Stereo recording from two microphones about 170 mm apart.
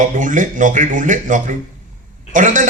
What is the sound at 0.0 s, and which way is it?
A man's voice, 50° right (ahead or behind).